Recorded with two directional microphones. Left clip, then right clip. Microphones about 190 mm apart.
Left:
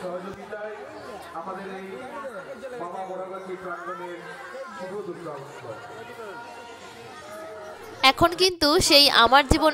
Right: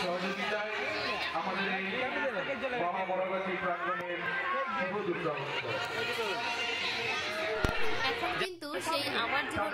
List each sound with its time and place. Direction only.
8.0 s a woman's voice: 60° left (ahead or behind)